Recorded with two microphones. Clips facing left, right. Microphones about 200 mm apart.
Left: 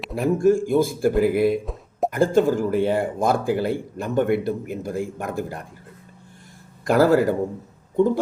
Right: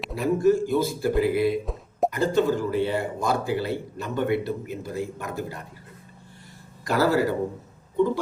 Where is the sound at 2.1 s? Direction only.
50° left (ahead or behind).